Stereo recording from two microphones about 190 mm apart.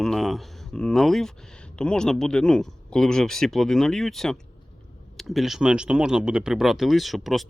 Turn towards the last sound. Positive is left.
turn(degrees=0)  # may be behind; listen again after turning